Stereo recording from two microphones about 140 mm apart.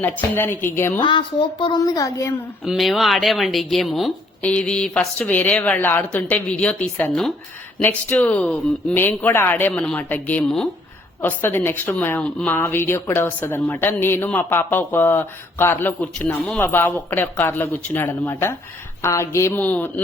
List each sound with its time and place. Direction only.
0.0 s a woman's voice: 15° left (ahead or behind)
0.9 s a woman's voice: 35° left (ahead or behind)
2.6 s a woman's voice: centre (ahead or behind)